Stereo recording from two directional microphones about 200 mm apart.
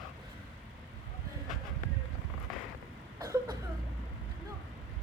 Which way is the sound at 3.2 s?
20° right (ahead or behind).